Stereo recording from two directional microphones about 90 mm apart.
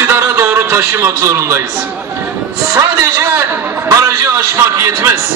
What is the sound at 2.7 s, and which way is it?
A man's voice, 35° right (ahead or behind).